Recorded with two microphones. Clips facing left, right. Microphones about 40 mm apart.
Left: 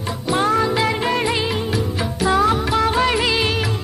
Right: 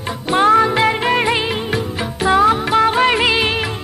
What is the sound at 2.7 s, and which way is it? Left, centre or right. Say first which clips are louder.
Music of bollywood: right 4 dB; right.